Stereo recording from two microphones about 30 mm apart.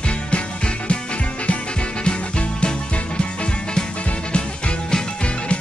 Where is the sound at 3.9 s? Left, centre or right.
Left.